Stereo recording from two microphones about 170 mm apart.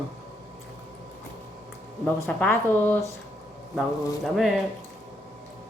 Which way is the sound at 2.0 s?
10° left (ahead or behind).